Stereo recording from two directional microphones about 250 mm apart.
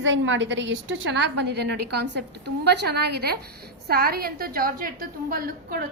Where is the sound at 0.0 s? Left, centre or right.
Right.